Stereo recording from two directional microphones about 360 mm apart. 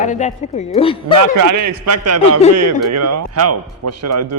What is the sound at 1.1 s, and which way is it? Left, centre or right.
Speech, right.